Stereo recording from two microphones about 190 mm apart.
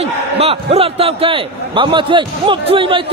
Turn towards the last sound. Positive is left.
turn(degrees=-25)  # may be behind; listen again after turning